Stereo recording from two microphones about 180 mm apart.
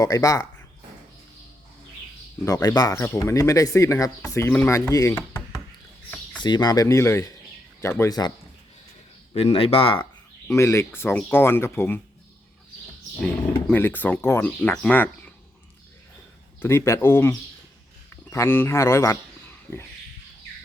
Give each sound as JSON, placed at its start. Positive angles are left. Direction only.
{"t": 0.0, "sound": "speech", "side_deg": 20}
{"t": 2.4, "sound": "speech", "side_deg": 20}
{"t": 9.3, "sound": "speech", "side_deg": 35}
{"t": 10.5, "sound": "speech", "side_deg": 15}
{"t": 13.7, "sound": "speech", "side_deg": 10}
{"t": 16.6, "sound": "speech", "side_deg": 15}